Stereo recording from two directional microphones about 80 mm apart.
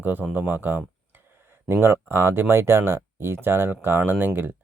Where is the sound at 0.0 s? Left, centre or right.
Right.